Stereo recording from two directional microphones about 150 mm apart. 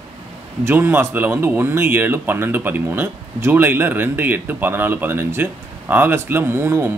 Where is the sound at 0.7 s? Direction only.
15° right (ahead or behind).